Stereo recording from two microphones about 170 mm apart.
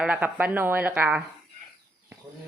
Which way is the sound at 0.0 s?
10° right (ahead or behind).